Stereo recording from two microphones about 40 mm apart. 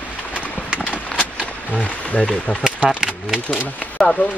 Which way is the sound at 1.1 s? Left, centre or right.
Left.